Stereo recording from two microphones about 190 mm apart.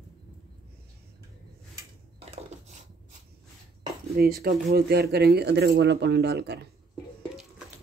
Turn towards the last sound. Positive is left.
turn(degrees=-60)  # may be behind; listen again after turning